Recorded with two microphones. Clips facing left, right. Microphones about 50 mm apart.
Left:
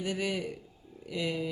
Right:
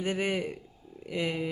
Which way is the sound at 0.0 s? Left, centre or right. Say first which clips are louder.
Right 3 dB; right.